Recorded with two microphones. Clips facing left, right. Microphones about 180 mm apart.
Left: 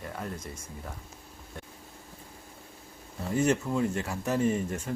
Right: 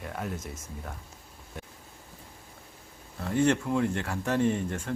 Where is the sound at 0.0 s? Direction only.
Centre (ahead or behind).